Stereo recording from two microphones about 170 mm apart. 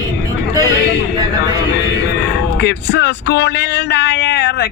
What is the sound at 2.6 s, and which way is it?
Speech, 80° left.